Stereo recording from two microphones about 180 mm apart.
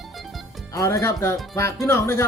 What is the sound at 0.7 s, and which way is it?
Speech, 20° left (ahead or behind).